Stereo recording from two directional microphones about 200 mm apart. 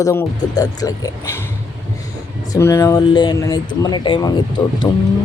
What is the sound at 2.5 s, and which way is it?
Speech, 15° left (ahead or behind).